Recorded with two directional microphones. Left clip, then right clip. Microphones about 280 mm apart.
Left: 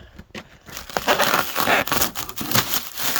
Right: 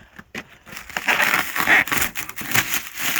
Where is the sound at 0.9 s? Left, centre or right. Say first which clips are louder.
Even; left.